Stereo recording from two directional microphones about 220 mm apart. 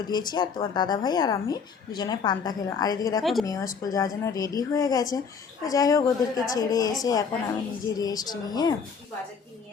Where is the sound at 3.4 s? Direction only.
15° left (ahead or behind).